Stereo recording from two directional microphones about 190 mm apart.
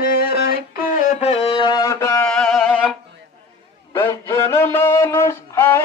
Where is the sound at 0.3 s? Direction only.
50° left (ahead or behind).